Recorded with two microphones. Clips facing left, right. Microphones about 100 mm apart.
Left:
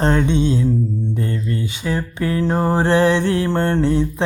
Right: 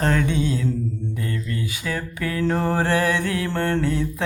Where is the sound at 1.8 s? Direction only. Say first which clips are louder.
Left 5 dB; 25° left (ahead or behind).